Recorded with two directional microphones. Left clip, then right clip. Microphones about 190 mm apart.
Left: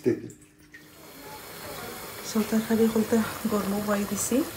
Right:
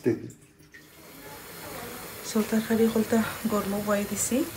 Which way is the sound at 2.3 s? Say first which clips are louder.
Even; 10° left (ahead or behind).